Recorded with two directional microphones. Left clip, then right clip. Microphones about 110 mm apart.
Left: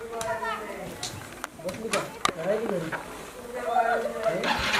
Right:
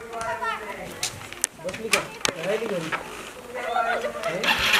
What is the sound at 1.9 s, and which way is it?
Speech, 20° right (ahead or behind).